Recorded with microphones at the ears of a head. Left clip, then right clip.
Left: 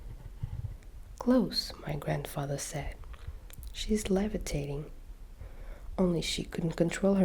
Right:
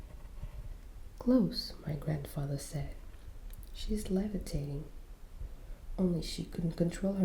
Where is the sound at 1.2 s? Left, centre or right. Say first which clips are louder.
Left 3 dB; left.